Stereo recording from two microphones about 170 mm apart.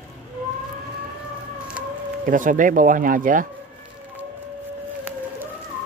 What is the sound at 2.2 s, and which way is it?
Speech, 50° right (ahead or behind).